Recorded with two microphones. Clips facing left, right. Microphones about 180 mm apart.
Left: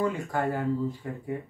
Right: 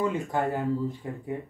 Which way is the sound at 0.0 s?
20° right (ahead or behind).